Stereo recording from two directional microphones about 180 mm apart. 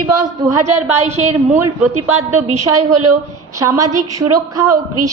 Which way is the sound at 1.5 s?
15° right (ahead or behind).